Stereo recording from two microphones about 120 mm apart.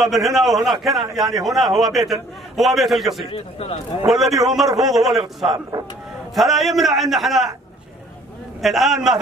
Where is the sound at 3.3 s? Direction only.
55° left (ahead or behind).